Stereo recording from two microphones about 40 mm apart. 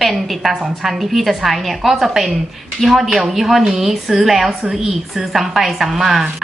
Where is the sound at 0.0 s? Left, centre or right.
Centre.